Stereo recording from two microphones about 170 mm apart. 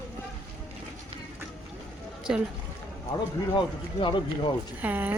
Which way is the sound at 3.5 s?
30° left (ahead or behind).